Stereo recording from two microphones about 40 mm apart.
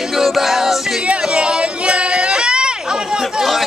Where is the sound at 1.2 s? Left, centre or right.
Right.